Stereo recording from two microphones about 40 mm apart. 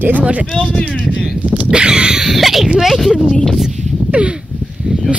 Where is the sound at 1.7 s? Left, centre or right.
Right.